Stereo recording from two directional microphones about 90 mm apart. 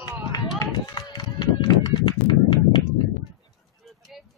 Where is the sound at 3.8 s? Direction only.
Centre (ahead or behind).